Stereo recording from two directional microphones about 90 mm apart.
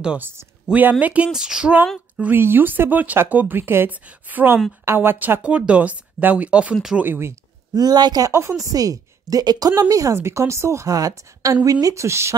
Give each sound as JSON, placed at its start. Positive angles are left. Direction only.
{"t": 0.7, "sound": "speech", "side_deg": -15}
{"t": 7.0, "sound": "speech", "side_deg": -25}
{"t": 7.7, "sound": "speech", "side_deg": -50}
{"t": 8.3, "sound": "speech", "side_deg": -35}